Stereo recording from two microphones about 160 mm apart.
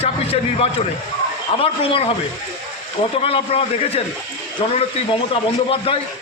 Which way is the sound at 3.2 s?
35° left (ahead or behind).